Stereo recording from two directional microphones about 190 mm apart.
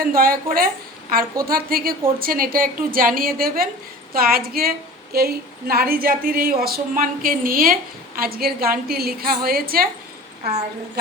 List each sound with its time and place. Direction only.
0.0 s speech: 50° right (ahead or behind)